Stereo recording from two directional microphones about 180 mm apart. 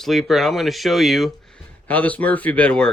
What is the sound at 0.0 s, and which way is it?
Speech, centre (ahead or behind).